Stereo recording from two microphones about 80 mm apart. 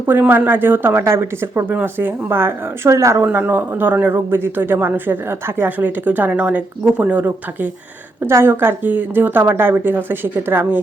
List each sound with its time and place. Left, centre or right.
0.0 s speech: right
3.2 s speech: right